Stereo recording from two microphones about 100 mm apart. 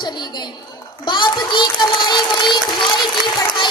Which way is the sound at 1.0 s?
50° left (ahead or behind).